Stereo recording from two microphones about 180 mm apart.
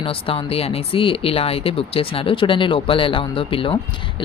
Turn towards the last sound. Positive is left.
turn(degrees=30)  # may be behind; listen again after turning